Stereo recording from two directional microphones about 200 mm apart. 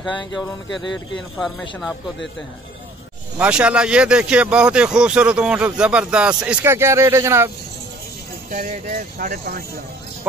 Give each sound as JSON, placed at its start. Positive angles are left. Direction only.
{"t": 3.3, "sound": "speech", "side_deg": -5}
{"t": 8.5, "sound": "speech", "side_deg": -40}